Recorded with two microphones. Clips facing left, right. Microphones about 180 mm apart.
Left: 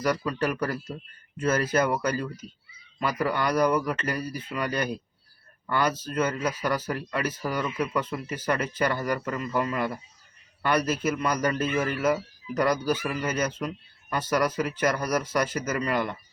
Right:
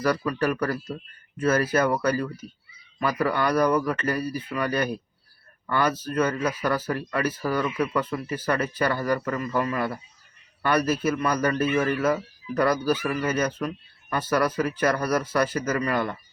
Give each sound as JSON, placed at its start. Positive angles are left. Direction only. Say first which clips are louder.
{"t": 0.0, "sound": "speech", "louder": "right 2 dB", "side_deg": 20}